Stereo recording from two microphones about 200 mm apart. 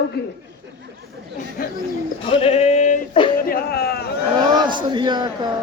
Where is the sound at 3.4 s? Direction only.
50° left (ahead or behind).